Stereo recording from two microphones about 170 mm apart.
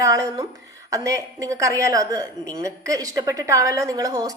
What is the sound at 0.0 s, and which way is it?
A woman's voice, 20° right (ahead or behind).